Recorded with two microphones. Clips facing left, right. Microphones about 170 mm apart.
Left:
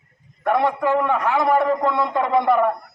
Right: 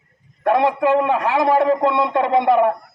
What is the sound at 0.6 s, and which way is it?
Speech, 90° right.